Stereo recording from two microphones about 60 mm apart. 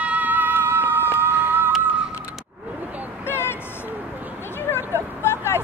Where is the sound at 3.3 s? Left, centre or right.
Left.